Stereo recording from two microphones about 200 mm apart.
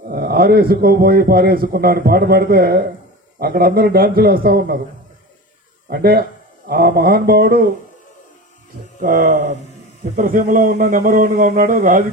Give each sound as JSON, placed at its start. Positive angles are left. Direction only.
{"t": 0.1, "sound": "a man's voice", "side_deg": -50}
{"t": 5.9, "sound": "a man's voice", "side_deg": -50}
{"t": 9.0, "sound": "a man's voice", "side_deg": -40}